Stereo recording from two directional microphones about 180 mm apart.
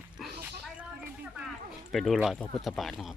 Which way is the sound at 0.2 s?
10° right (ahead or behind).